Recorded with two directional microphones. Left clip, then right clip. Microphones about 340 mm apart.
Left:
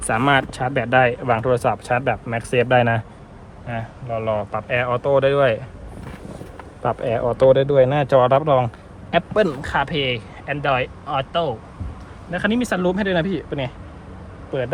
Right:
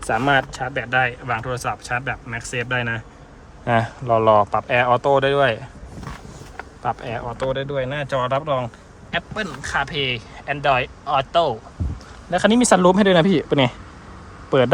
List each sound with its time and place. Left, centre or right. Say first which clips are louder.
0.1 s speech: left 1 dB; centre
4.1 s speech: right 8 dB; centre
6.8 s speech: left 5 dB; centre; by 13.7 s right